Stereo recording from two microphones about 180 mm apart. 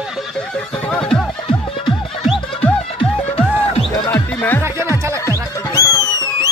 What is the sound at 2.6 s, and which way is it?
Music, 5° left (ahead or behind).